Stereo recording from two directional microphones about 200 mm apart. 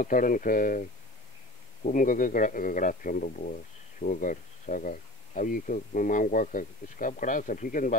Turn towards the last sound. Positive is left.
turn(degrees=40)  # may be behind; listen again after turning